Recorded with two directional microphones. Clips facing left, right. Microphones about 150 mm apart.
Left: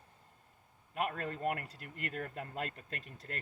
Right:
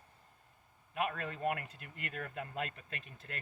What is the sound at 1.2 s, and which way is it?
Speech, 5° right (ahead or behind).